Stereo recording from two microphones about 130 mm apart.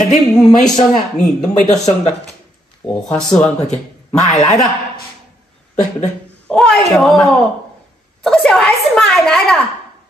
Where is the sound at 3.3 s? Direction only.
5° left (ahead or behind).